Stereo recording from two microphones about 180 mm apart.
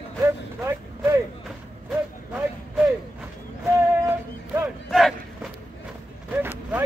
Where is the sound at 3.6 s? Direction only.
10° right (ahead or behind).